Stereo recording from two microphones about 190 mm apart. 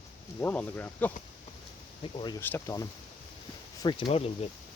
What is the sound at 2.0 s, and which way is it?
Speech, 25° left (ahead or behind).